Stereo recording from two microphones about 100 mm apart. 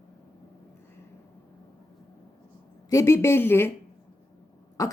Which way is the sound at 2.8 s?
30° left (ahead or behind).